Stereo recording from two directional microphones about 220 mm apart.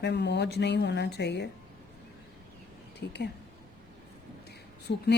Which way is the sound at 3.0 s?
50° left (ahead or behind).